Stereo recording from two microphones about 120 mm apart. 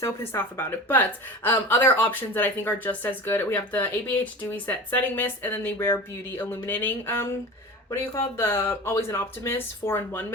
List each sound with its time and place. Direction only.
0.0 s speech: 20° left (ahead or behind)